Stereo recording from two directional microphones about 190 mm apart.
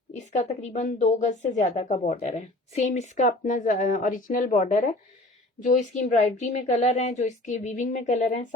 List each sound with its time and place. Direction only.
0.1 s speech: 35° left (ahead or behind)